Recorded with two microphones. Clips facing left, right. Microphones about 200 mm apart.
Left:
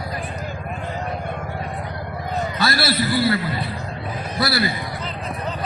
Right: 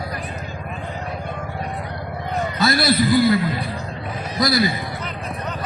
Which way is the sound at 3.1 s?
15° right (ahead or behind).